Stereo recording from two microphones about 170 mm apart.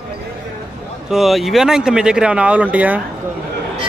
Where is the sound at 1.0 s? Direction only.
Centre (ahead or behind).